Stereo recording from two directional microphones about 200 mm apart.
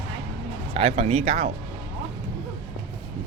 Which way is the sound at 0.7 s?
30° right (ahead or behind).